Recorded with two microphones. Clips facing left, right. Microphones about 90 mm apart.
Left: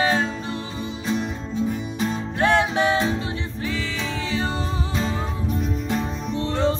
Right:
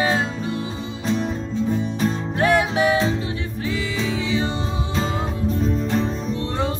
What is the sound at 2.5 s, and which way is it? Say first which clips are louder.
Music: right 2 dB; 10° right (ahead or behind).